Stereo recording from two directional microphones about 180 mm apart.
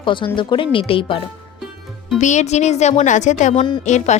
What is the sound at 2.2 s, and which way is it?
A woman's voice, 40° left (ahead or behind).